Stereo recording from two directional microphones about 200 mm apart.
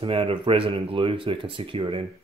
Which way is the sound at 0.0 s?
25° right (ahead or behind).